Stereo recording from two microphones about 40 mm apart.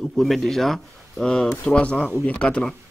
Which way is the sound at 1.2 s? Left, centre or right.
Centre.